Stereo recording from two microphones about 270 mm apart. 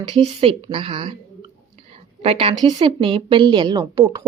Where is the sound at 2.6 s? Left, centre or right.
Centre.